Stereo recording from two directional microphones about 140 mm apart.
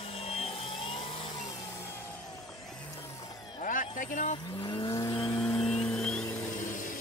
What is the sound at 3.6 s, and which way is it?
Speech, 70° left (ahead or behind).